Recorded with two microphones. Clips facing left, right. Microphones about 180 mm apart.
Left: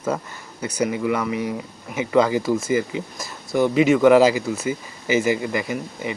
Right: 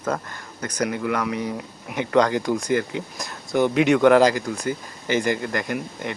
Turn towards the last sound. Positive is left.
turn(degrees=5)  # may be behind; listen again after turning